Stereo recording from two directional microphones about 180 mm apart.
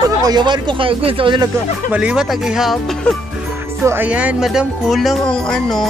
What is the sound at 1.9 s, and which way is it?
Speech, 5° right (ahead or behind).